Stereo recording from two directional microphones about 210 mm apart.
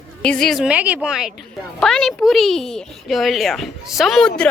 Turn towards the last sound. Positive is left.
turn(degrees=0)  # may be behind; listen again after turning